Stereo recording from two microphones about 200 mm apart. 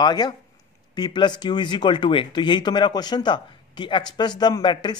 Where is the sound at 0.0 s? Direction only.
20° left (ahead or behind).